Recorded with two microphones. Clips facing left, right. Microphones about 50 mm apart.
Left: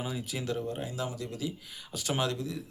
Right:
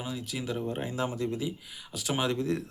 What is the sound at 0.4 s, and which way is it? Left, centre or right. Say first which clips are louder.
Speech: right 2 dB; right.